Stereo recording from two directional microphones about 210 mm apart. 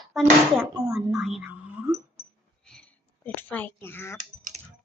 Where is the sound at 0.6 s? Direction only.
15° right (ahead or behind).